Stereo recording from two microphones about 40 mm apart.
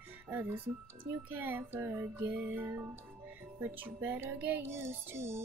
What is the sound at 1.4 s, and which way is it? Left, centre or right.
Child singing, right.